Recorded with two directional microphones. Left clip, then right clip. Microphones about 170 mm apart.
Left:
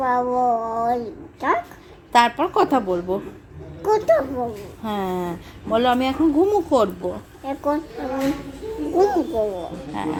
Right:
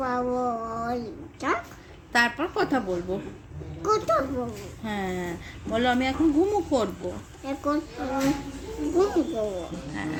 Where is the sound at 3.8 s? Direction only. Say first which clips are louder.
Left 6 dB; 5° left (ahead or behind).